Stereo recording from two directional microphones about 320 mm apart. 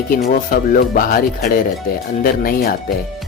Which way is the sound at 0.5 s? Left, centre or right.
Left.